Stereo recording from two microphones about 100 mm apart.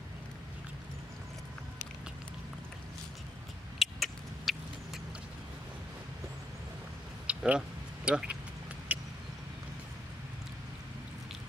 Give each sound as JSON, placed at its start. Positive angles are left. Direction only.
{"t": 3.8, "sound": "rodents", "side_deg": 0}
{"t": 7.2, "sound": "a sound", "side_deg": -10}
{"t": 8.9, "sound": "vehicle", "side_deg": -15}